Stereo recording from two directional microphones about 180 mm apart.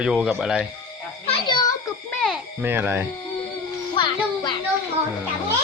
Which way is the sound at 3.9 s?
25° left (ahead or behind).